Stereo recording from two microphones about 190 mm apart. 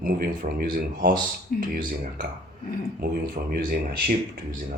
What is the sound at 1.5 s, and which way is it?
Speech, 45° left (ahead or behind).